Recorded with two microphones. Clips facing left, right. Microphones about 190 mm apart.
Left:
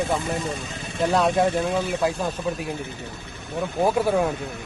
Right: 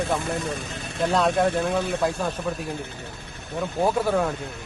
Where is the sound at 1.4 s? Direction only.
55° right (ahead or behind).